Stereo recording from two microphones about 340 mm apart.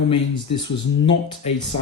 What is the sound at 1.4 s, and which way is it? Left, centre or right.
Speech, centre.